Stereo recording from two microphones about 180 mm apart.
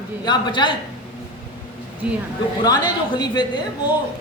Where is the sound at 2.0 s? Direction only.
5° right (ahead or behind).